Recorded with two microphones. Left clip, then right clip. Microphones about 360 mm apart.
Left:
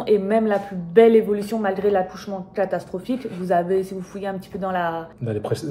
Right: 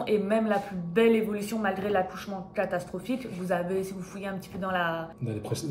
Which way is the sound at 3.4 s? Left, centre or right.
Centre.